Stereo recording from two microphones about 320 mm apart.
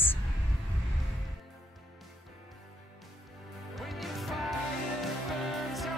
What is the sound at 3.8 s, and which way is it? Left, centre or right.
Music, centre.